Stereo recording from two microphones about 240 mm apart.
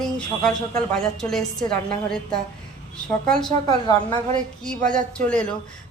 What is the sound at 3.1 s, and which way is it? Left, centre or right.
Speech, centre.